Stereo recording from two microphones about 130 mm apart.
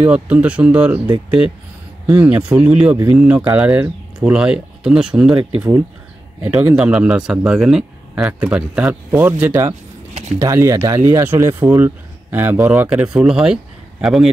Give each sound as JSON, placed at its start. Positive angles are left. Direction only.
{"t": 0.0, "sound": "speech", "side_deg": -10}
{"t": 2.1, "sound": "speech", "side_deg": -10}
{"t": 5.3, "sound": "speech", "side_deg": -45}
{"t": 6.4, "sound": "speech", "side_deg": -5}